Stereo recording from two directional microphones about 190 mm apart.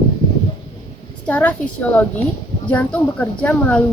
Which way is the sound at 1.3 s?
5° left (ahead or behind).